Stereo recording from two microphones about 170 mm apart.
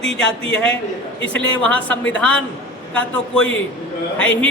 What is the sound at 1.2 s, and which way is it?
Speech, 10° left (ahead or behind).